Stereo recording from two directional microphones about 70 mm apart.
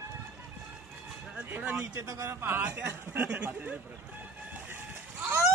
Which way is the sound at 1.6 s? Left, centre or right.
Right.